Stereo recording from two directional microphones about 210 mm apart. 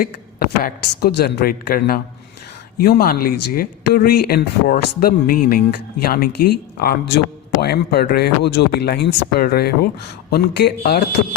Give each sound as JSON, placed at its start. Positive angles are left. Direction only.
{"t": 0.0, "sound": "speech", "side_deg": 45}